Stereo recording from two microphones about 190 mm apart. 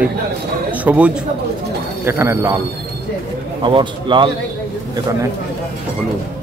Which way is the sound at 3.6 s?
25° right (ahead or behind).